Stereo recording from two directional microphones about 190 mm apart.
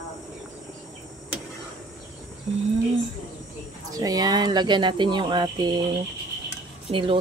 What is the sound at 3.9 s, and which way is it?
Speech, 20° right (ahead or behind).